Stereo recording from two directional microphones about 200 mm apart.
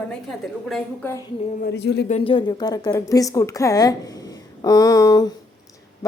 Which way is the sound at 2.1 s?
30° left (ahead or behind).